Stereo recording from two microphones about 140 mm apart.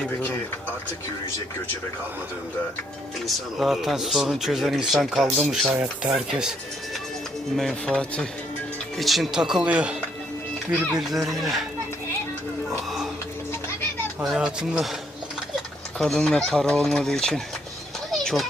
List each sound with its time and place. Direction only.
0.0 s speech: 10° left (ahead or behind)
3.2 s speech: centre (ahead or behind)
7.5 s speech: 5° left (ahead or behind)
14.2 s speech: 10° right (ahead or behind)
16.0 s speech: 5° left (ahead or behind)
18.1 s children playing: centre (ahead or behind)